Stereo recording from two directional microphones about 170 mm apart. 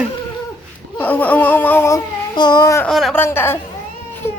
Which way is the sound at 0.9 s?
10° left (ahead or behind).